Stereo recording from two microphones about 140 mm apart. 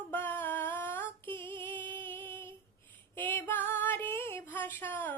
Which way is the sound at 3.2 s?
15° left (ahead or behind).